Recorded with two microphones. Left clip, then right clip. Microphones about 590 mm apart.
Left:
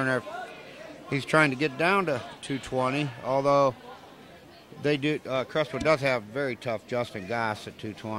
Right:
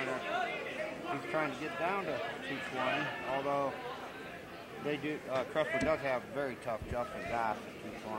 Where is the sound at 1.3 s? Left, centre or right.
Left.